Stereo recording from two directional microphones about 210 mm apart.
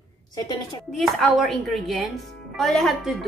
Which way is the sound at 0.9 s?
Centre (ahead or behind).